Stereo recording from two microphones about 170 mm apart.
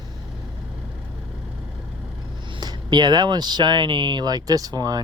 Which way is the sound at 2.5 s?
25° right (ahead or behind).